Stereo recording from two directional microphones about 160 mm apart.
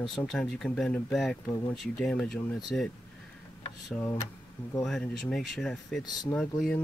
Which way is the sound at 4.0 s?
15° left (ahead or behind).